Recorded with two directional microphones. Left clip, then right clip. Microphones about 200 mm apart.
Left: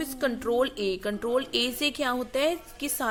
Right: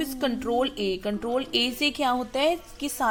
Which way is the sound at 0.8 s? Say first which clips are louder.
Right 1 dB; 55° left (ahead or behind).